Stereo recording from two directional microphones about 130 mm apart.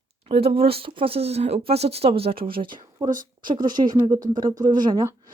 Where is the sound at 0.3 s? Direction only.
50° right (ahead or behind).